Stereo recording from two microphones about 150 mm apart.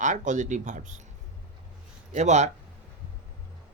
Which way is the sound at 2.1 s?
50° right (ahead or behind).